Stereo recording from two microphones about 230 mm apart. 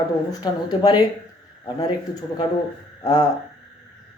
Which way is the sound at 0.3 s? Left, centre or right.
Centre.